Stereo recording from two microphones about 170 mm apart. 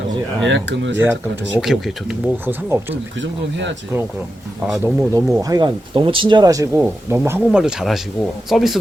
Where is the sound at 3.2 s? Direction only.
90° right.